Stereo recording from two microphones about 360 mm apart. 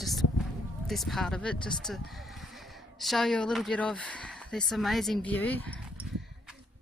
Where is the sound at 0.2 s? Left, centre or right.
Left.